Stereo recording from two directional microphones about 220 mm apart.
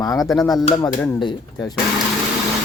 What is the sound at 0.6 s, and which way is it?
Speech, 20° left (ahead or behind).